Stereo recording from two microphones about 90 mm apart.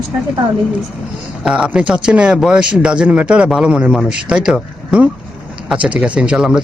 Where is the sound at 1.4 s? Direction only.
10° right (ahead or behind).